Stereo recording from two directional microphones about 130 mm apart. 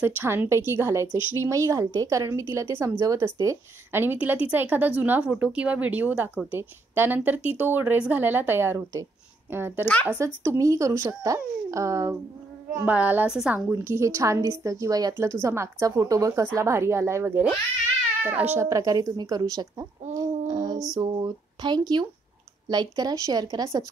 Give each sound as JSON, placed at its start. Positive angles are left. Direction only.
{"t": 0.0, "sound": "a woman's voice", "side_deg": -15}
{"t": 12.7, "sound": "a woman's voice", "side_deg": -10}
{"t": 13.7, "sound": "speech", "side_deg": -20}